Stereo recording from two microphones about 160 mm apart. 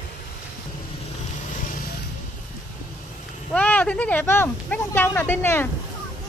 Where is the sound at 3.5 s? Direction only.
10° left (ahead or behind).